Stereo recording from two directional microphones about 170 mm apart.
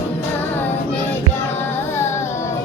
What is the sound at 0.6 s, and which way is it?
Music, 10° left (ahead or behind).